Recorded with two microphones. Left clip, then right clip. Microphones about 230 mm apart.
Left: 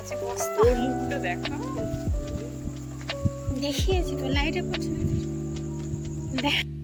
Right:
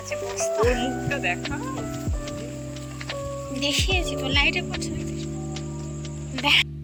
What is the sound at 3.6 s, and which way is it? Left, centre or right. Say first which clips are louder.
Speech: right 4 dB; centre.